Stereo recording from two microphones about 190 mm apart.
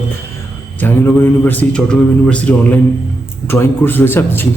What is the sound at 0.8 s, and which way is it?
A man's voice, 10° left (ahead or behind).